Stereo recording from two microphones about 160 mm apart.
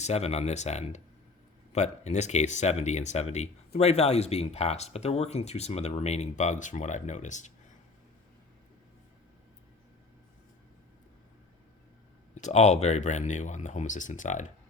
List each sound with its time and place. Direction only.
0.0 s speech: 40° left (ahead or behind)
12.3 s speech: 45° left (ahead or behind)